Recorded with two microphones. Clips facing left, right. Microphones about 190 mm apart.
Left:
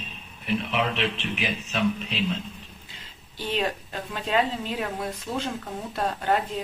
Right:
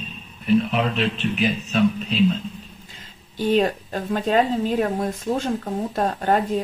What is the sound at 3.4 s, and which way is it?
Speech, 45° right (ahead or behind).